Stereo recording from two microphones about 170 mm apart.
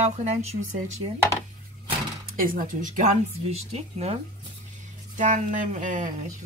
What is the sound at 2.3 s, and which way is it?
Speech, 55° right (ahead or behind).